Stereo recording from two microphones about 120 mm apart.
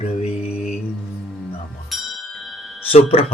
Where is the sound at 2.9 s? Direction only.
55° left (ahead or behind).